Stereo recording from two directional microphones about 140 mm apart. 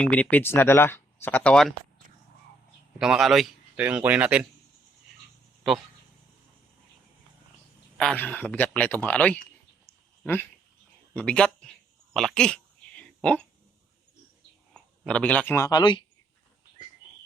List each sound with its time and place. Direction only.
0.0 s speech: 10° left (ahead or behind)
3.0 s a man's voice: centre (ahead or behind)
3.8 s speech: 10° right (ahead or behind)
7.9 s speech: 10° left (ahead or behind)
9.8 s a sound: 15° left (ahead or behind)
11.1 s speech: 5° left (ahead or behind)
12.1 s a sound: 5° left (ahead or behind)
14.7 s a sound: 5° left (ahead or behind)
15.6 s speech: 30° left (ahead or behind)